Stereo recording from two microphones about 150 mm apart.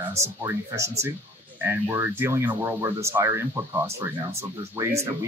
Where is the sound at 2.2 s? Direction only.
15° right (ahead or behind).